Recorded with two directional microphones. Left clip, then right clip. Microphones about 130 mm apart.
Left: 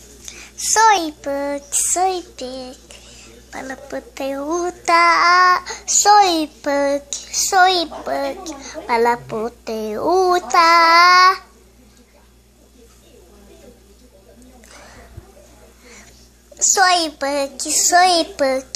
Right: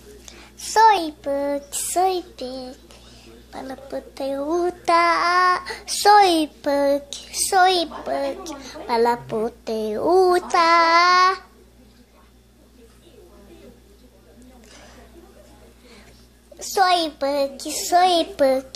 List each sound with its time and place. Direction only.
0.2 s a sound: 25° right (ahead or behind)
0.8 s a child's voice: centre (ahead or behind)
1.5 s child singing: 15° right (ahead or behind); by 4.5 s centre (ahead or behind)
4.5 s a child's voice: 15° right (ahead or behind)
5.9 s a child's voice: 25° right (ahead or behind); by 11.4 s 10° right (ahead or behind)
14.7 s a sound: 5° left (ahead or behind)
16.5 s a child's voice: 5° right (ahead or behind)